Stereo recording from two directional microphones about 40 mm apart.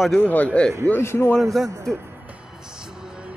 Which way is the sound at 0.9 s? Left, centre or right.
Left.